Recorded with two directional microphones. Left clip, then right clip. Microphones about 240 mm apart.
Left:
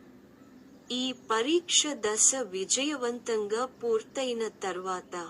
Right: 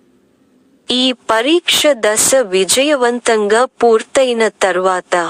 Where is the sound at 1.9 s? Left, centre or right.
Right.